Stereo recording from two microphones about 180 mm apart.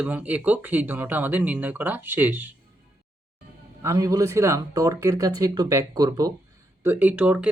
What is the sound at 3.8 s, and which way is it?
Speech, 15° right (ahead or behind).